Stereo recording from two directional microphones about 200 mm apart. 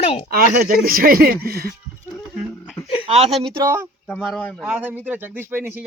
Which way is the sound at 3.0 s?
30° right (ahead or behind).